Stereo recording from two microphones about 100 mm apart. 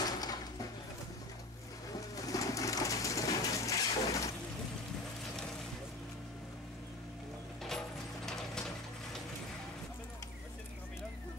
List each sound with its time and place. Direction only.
0.0 s mechanisms: 40° left (ahead or behind)
1.9 s bird: 35° left (ahead or behind)